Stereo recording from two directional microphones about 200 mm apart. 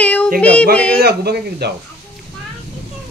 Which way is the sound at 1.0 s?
55° right (ahead or behind).